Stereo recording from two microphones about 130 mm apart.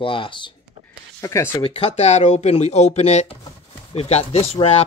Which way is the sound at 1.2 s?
25° left (ahead or behind).